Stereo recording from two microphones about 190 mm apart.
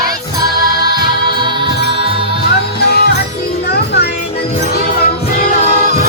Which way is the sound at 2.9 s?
55° left (ahead or behind).